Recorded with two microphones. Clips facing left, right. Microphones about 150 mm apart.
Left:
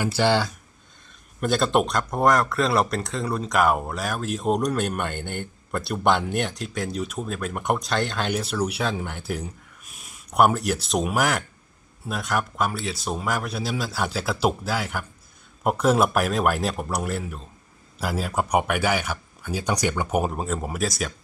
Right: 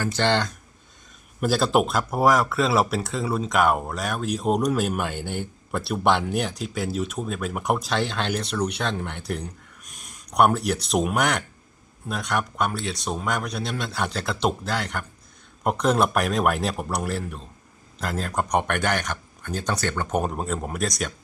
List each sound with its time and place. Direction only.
0.0 s speech: 10° left (ahead or behind)